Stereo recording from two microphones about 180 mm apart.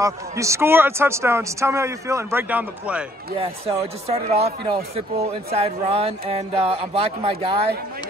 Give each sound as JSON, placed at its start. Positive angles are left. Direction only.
{"t": 0.0, "sound": "speech", "side_deg": -15}
{"t": 3.3, "sound": "speech", "side_deg": -35}